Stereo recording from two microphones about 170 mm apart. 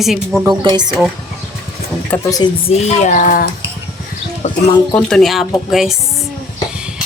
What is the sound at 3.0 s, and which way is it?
Cutlery, 50° left (ahead or behind).